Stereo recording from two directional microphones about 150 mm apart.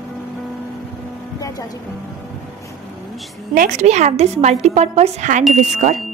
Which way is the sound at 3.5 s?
50° right (ahead or behind).